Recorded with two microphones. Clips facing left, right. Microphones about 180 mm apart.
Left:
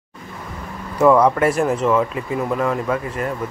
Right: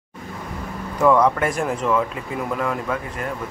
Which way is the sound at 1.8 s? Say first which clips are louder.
Left 3 dB; 30° left (ahead or behind).